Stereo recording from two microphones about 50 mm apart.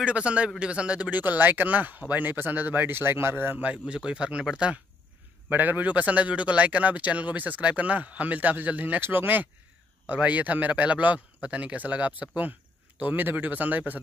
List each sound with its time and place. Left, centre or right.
0.0 s a man's voice: right
1.1 s speech: right
3.5 s a man's voice: right
5.5 s a man's voice: right
9.0 s a man's voice: right